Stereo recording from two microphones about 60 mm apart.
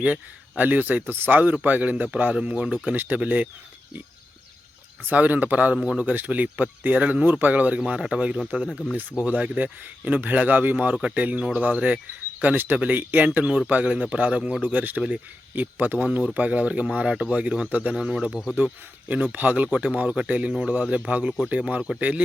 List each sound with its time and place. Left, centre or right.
0.0 s speech: right
2.9 s speech: right
5.0 s speech: right
5.7 s speech: centre
6.0 s speech: right
7.8 s speech: centre; by 16.0 s right
16.0 s speech: centre
18.3 s speech: centre
18.5 s speech: right
20.5 s speech: centre
21.1 s speech: right
21.8 s speech: centre